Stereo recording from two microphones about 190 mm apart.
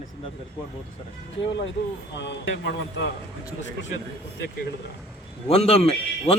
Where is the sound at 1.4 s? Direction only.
70° left (ahead or behind).